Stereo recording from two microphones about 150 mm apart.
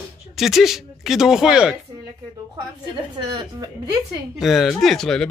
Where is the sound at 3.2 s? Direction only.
30° right (ahead or behind).